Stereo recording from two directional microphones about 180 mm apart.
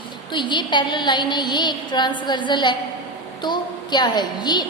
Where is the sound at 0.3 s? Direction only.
25° left (ahead or behind).